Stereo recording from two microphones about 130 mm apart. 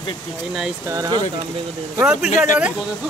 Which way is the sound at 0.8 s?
25° right (ahead or behind).